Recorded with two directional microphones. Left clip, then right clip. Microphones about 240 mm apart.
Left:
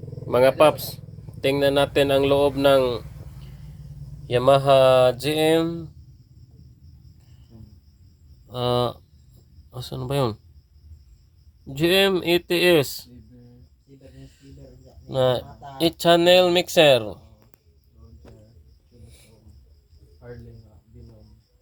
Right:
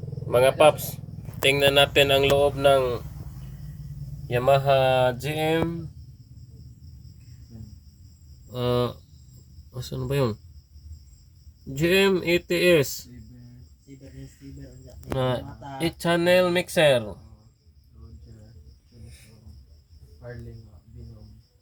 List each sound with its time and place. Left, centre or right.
0.3 s speech: left
4.3 s speech: left
8.4 s speech: centre
11.7 s speech: centre
15.2 s speech: left